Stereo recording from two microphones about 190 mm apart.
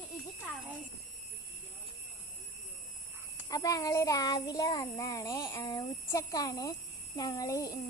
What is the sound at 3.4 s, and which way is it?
Child singing, 20° left (ahead or behind).